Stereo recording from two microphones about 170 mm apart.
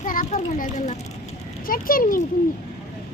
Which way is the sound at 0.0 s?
50° left (ahead or behind).